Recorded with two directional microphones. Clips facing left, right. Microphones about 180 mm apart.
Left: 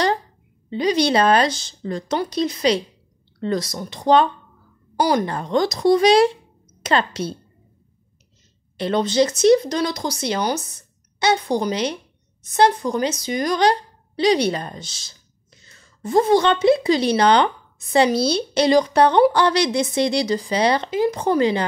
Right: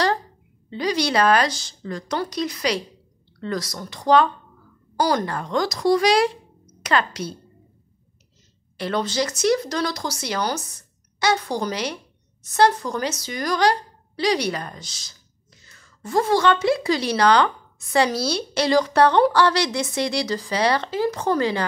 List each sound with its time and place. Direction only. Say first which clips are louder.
0.7 s a woman's voice: left 4 dB; 20° left (ahead or behind)
8.7 s speech: left 5 dB; 20° left (ahead or behind)